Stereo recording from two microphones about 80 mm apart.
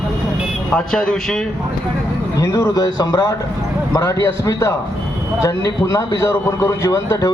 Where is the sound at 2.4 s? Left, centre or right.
Left.